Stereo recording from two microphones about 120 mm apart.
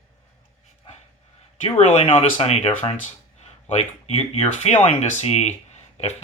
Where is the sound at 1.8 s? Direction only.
60° left (ahead or behind).